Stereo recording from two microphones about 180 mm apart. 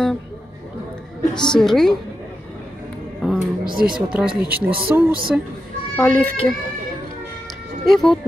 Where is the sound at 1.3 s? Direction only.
5° left (ahead or behind).